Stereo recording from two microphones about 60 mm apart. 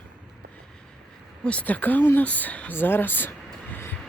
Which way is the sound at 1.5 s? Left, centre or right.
Left.